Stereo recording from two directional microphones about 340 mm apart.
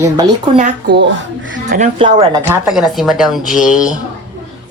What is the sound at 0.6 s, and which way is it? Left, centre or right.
Speech, right.